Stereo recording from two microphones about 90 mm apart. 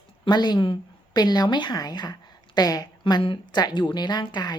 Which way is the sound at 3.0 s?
65° left (ahead or behind).